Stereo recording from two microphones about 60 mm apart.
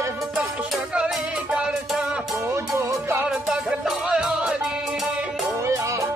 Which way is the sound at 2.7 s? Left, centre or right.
Right.